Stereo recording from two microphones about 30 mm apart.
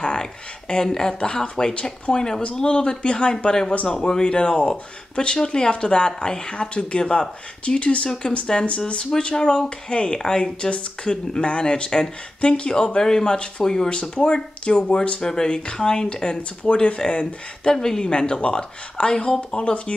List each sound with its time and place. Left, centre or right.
0.0 s a sound: left
0.8 s speech: centre
1.2 s speech: left
3.4 s speech: left
3.7 s a man's voice: left
4.1 s speech: left
12.8 s speech: centre
13.8 s speech: left
15.1 s speech: centre
15.4 s speech: left
16.7 s speech: left
17.8 s speech: centre
18.4 s speech: left
19.5 s speech: left